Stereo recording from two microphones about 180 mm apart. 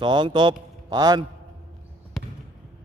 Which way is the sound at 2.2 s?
Centre (ahead or behind).